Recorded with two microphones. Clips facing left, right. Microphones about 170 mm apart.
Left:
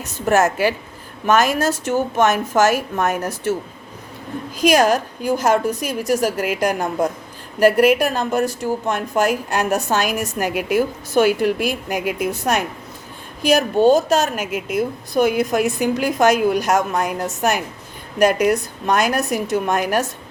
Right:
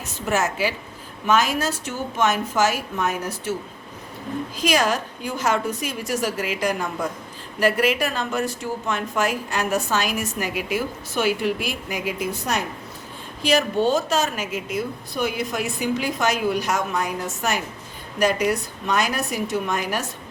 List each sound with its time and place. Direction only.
0.3 s a woman's voice: 50° left (ahead or behind)
4.6 s a woman's voice: 45° left (ahead or behind)
13.4 s a woman's voice: 45° left (ahead or behind)